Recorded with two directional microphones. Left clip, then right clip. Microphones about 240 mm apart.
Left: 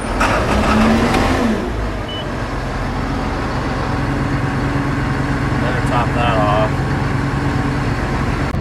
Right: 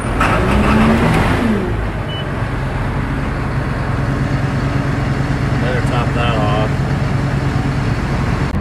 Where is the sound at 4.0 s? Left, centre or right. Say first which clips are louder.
Left 1 dB; centre.